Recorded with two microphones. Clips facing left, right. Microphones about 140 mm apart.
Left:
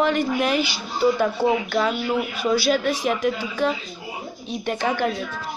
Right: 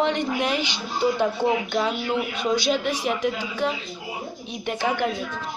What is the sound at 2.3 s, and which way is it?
A woman's voice, 20° right (ahead or behind).